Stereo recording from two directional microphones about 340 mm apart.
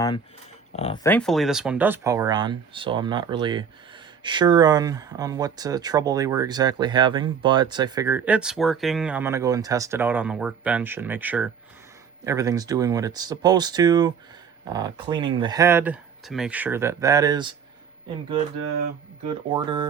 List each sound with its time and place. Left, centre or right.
0.8 s speech: centre
1.1 s speech: centre
19.5 s speech: centre